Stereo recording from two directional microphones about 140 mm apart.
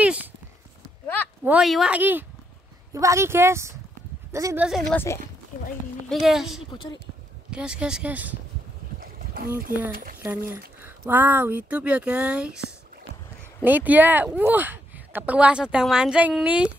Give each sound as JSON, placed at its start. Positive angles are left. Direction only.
{"t": 1.4, "sound": "speech", "side_deg": -5}
{"t": 4.6, "sound": "a woman's voice", "side_deg": 0}
{"t": 4.9, "sound": "speech", "side_deg": 20}
{"t": 6.0, "sound": "a woman's voice", "side_deg": 0}
{"t": 6.7, "sound": "a woman's voice", "side_deg": 30}
{"t": 7.5, "sound": "speech", "side_deg": -5}
{"t": 10.1, "sound": "speech", "side_deg": -15}